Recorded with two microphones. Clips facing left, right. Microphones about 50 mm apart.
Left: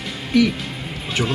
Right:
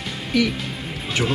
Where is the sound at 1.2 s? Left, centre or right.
Centre.